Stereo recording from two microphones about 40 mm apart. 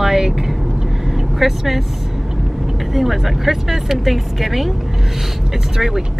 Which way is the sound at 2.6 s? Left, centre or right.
Centre.